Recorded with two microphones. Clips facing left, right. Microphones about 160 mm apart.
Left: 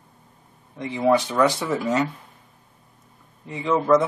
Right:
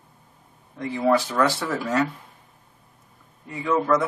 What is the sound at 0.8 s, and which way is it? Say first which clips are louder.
Speech: left 1 dB; 20° left (ahead or behind).